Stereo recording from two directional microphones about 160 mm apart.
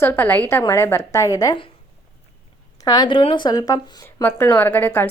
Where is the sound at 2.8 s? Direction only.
25° left (ahead or behind).